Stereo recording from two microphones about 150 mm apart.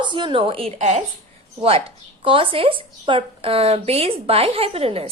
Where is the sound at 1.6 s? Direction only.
40° right (ahead or behind).